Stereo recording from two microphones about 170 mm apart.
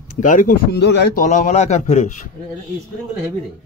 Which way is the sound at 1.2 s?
50° left (ahead or behind).